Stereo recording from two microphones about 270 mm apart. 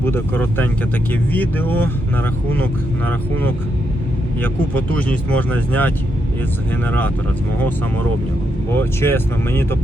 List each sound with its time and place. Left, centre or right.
0.0 s speech: centre
4.9 s speech: centre
8.7 s speech: centre